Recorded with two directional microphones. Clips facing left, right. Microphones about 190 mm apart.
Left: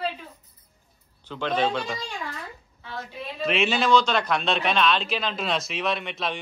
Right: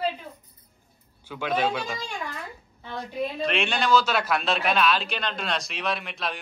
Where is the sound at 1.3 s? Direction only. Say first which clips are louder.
Left 1 dB; 10° right (ahead or behind).